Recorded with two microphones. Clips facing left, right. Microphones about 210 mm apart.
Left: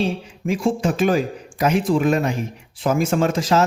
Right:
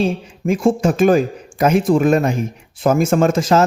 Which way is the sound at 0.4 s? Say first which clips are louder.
Right 5 dB; 50° right (ahead or behind).